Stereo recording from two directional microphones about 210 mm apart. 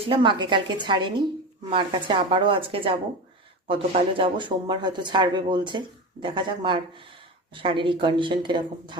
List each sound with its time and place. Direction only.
0.0 s speech: 25° right (ahead or behind)